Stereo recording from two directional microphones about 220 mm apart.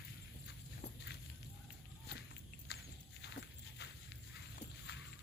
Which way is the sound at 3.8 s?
50° left (ahead or behind).